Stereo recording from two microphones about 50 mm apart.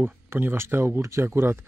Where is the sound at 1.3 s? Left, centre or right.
Right.